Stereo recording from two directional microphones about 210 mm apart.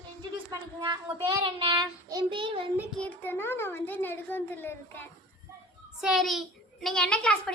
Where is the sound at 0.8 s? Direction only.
20° right (ahead or behind).